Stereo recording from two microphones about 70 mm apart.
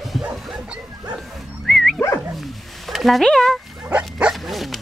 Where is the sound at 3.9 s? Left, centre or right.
Centre.